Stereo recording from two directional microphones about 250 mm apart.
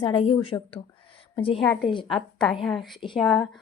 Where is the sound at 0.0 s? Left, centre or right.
Left.